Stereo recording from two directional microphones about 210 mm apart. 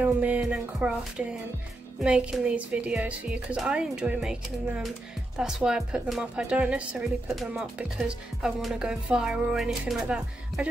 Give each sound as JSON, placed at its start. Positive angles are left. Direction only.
{"t": 0.0, "sound": "a woman's voice", "side_deg": -10}